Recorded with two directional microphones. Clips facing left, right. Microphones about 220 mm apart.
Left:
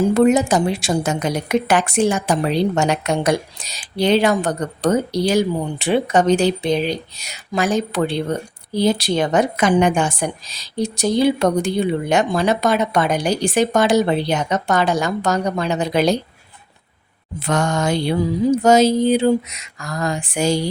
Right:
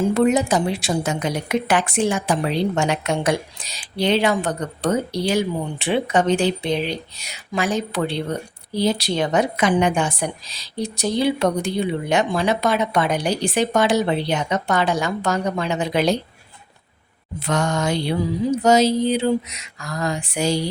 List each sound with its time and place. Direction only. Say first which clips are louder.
0.0 s a woman's voice: left 3 dB; 45° left (ahead or behind)
17.4 s a woman's voice: left 2 dB; 50° left (ahead or behind)